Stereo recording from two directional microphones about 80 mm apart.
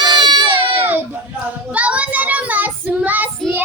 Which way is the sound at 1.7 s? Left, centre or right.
Centre.